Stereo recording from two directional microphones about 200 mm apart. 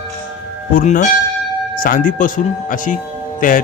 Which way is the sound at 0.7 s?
45° left (ahead or behind).